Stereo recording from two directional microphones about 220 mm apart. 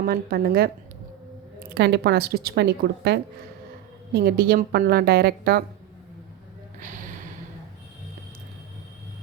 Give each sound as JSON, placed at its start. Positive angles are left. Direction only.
{"t": 0.0, "sound": "a woman's voice", "side_deg": -45}
{"t": 6.7, "sound": "gasp", "side_deg": -35}